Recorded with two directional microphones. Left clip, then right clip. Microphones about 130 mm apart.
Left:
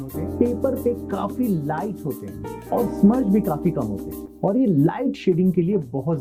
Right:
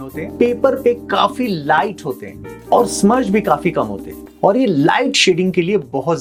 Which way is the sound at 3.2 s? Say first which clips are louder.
Right 7 dB; 20° right (ahead or behind).